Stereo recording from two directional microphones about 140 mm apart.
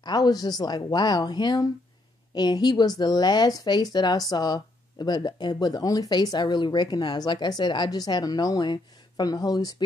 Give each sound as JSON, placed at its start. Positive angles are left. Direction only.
{"t": 0.0, "sound": "speech", "side_deg": 30}